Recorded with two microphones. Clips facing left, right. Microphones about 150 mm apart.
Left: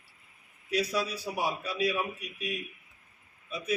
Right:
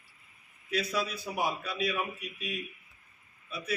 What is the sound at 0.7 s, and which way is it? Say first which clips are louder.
A man's voice: left 2 dB; 15° left (ahead or behind).